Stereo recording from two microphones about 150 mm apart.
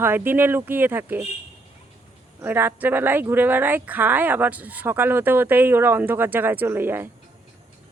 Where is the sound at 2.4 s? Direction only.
15° right (ahead or behind).